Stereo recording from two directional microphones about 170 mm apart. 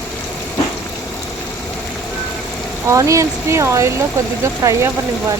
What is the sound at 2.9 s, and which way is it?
Speech, 20° right (ahead or behind).